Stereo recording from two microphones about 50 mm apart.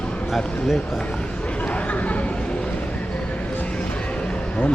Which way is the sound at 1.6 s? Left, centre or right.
Left.